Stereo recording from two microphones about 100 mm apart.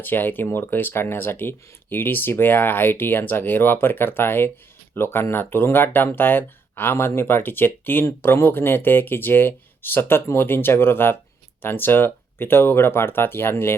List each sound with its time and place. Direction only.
0.0 s speech: 20° left (ahead or behind)